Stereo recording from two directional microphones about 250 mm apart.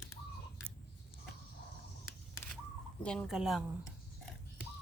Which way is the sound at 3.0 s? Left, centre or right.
Centre.